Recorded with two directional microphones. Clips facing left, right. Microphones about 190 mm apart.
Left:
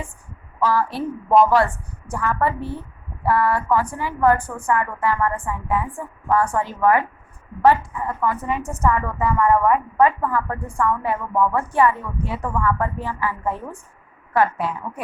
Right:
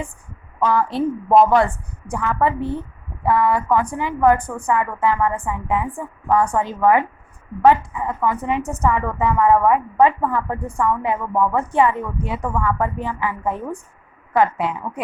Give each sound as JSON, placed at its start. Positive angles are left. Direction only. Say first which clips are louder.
{"t": 0.6, "sound": "a woman's voice", "louder": "right 2 dB", "side_deg": -20}